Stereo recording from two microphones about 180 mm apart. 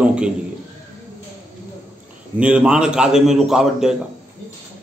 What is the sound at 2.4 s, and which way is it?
A man's voice, 5° right (ahead or behind).